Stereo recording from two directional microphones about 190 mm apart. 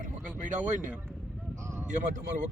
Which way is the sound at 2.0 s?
40° right (ahead or behind).